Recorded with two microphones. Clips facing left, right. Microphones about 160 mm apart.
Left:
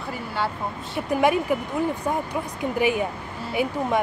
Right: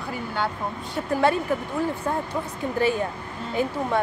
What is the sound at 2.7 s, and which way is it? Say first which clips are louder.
Speech: even; 15° left (ahead or behind).